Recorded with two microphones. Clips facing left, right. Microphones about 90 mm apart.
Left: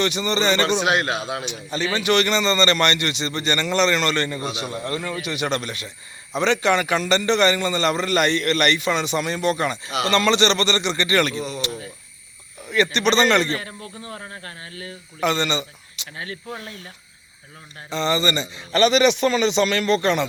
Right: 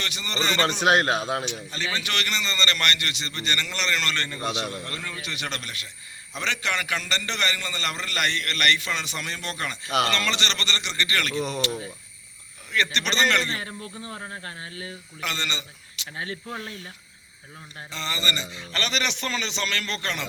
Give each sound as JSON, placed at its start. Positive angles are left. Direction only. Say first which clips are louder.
{"t": 0.0, "sound": "a man's voice", "louder": "left 8 dB", "side_deg": 20}
{"t": 0.8, "sound": "a man's voice", "louder": "even", "side_deg": -40}
{"t": 1.7, "sound": "a man's voice", "louder": "left 11 dB", "side_deg": 15}
{"t": 12.7, "sound": "a man's voice", "louder": "left 7 dB", "side_deg": 15}
{"t": 14.0, "sound": "speech", "louder": "left 2 dB", "side_deg": -20}
{"t": 15.2, "sound": "a man's voice", "louder": "left 10 dB", "side_deg": 20}
{"t": 16.1, "sound": "speech", "louder": "left 1 dB", "side_deg": -25}
{"t": 17.9, "sound": "a man's voice", "louder": "left 9 dB", "side_deg": 25}